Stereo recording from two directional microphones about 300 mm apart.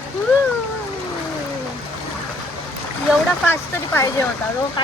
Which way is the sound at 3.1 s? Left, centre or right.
Centre.